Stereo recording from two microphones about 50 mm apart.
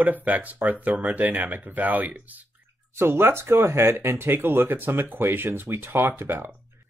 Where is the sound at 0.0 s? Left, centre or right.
Right.